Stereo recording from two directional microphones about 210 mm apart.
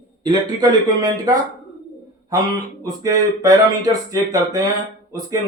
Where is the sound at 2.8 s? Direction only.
15° right (ahead or behind).